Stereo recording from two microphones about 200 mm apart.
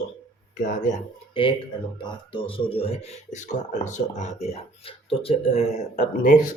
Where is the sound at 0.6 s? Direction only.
40° left (ahead or behind).